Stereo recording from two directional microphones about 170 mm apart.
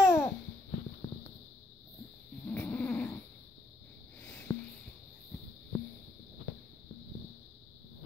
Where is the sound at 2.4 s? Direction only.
10° left (ahead or behind).